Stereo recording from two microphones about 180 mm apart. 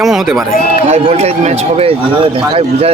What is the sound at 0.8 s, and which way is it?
Speech, 35° right (ahead or behind).